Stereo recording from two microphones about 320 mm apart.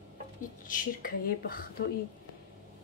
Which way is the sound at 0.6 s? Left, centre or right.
Left.